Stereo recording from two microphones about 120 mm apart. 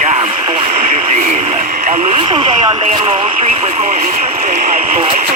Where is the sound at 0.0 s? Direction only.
70° right (ahead or behind).